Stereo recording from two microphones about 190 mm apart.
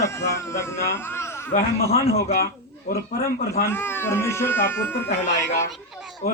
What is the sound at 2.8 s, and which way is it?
Speech, 55° left (ahead or behind).